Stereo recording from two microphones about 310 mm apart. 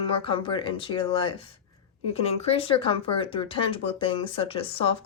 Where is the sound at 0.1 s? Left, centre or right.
Centre.